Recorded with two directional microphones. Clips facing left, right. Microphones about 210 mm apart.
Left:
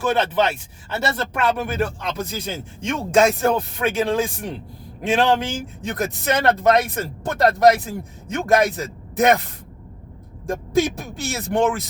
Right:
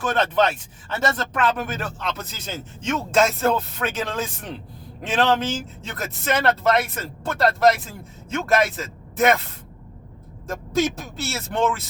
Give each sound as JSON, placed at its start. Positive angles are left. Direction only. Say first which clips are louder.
{"t": 0.0, "sound": "speech", "louder": "left 1 dB", "side_deg": 10}
{"t": 10.4, "sound": "speech", "louder": "left 3 dB", "side_deg": 15}